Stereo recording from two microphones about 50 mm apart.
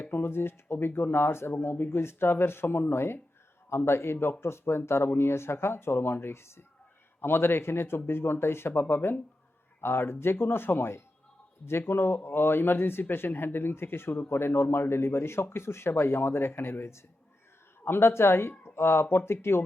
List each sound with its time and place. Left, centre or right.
0.0 s speech: left